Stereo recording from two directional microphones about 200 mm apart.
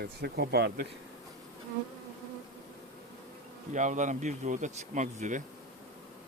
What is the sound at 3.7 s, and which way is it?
Speech, 35° right (ahead or behind).